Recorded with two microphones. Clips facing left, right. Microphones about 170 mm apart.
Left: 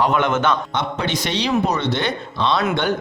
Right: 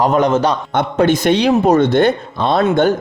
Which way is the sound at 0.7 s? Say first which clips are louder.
Right 9 dB; 50° right (ahead or behind).